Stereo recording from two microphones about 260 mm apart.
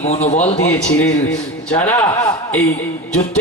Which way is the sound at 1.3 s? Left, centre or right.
Centre.